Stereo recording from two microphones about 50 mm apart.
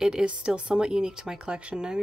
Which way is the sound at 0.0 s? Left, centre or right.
Centre.